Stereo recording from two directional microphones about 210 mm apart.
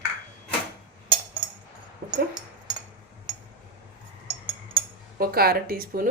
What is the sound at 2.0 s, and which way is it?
Dog, 45° right (ahead or behind).